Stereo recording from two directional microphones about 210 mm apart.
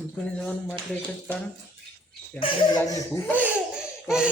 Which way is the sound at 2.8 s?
10° left (ahead or behind).